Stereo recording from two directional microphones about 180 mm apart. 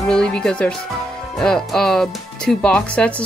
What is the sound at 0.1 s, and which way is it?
Speech, 5° left (ahead or behind).